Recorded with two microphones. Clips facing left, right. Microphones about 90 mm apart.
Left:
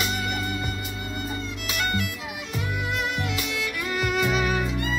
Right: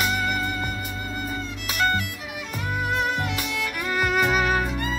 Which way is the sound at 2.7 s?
45° right (ahead or behind).